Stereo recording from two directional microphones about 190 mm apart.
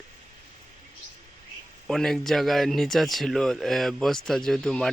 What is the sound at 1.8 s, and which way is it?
Speech, centre (ahead or behind).